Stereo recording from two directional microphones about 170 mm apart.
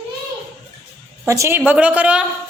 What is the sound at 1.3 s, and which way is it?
Speech, 15° right (ahead or behind).